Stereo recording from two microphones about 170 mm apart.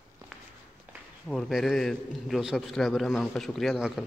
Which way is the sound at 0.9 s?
10° right (ahead or behind).